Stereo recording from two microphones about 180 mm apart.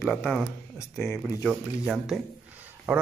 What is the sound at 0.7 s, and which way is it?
Speech, 15° left (ahead or behind).